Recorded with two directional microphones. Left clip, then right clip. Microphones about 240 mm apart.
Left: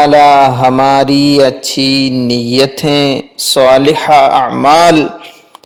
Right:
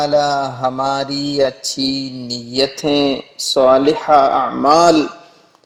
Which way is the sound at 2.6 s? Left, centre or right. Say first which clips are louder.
Left 4 dB; left.